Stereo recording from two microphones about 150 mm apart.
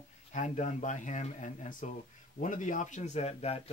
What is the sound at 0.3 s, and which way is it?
Speech, 55° left (ahead or behind).